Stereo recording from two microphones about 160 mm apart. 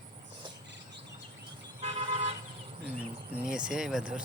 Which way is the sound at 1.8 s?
35° right (ahead or behind).